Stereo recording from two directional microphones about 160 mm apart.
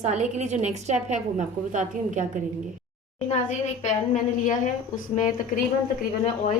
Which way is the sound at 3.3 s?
45° left (ahead or behind).